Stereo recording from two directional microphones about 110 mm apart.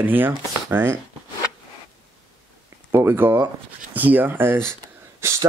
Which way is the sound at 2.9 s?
20° right (ahead or behind).